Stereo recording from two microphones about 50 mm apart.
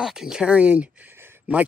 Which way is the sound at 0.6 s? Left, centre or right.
Right.